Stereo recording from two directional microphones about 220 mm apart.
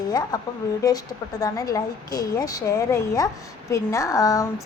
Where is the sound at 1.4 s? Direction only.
15° left (ahead or behind).